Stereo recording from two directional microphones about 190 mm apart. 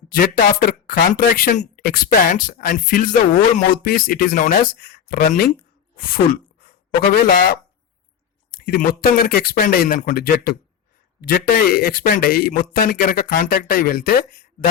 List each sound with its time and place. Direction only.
0.1 s a man's voice: 50° left (ahead or behind)
6.0 s a sound: 50° left (ahead or behind)
7.2 s a man's voice: 50° left (ahead or behind)